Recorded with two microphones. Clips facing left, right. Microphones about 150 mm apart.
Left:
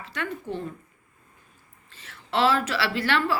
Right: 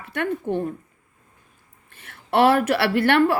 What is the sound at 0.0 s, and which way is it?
Speech, 55° right (ahead or behind).